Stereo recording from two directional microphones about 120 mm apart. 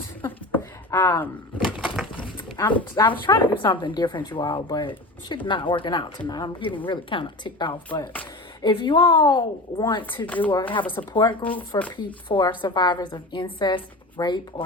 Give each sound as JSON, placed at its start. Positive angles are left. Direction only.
{"t": 0.3, "sound": "a sound", "side_deg": 15}
{"t": 1.5, "sound": "a sound", "side_deg": -5}
{"t": 2.6, "sound": "speech", "side_deg": 15}
{"t": 3.3, "sound": "speech", "side_deg": 30}
{"t": 3.6, "sound": "speech", "side_deg": 45}
{"t": 10.2, "sound": "speech", "side_deg": 15}
{"t": 10.5, "sound": "speech", "side_deg": 45}